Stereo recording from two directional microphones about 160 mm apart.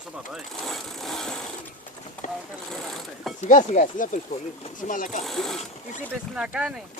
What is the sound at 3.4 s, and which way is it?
Speech, 50° left (ahead or behind).